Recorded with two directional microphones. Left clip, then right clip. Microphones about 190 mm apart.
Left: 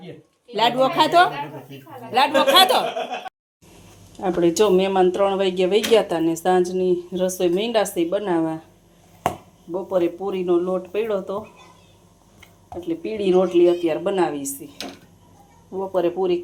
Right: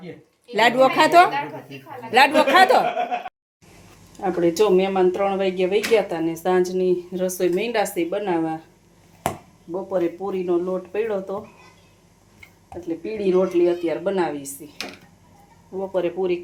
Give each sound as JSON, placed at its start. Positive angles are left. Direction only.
{"t": 0.5, "sound": "a woman's voice", "side_deg": -20}
{"t": 4.2, "sound": "speech", "side_deg": 15}
{"t": 9.7, "sound": "speech", "side_deg": 5}
{"t": 12.9, "sound": "speech", "side_deg": 5}